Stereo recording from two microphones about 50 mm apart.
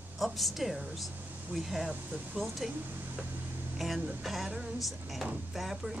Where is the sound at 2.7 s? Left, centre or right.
Right.